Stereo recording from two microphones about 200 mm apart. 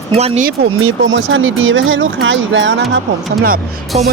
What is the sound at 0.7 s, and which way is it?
Speech, 80° right.